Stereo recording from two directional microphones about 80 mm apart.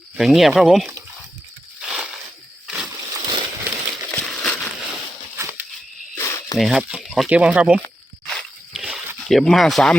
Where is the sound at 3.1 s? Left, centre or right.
Right.